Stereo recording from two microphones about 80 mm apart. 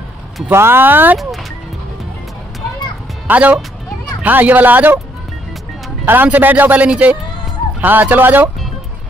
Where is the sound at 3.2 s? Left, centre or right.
Centre.